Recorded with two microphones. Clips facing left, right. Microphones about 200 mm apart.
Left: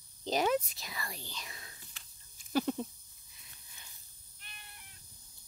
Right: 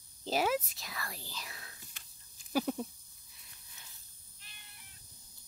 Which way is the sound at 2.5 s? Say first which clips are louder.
Left 1 dB; 5° right (ahead or behind).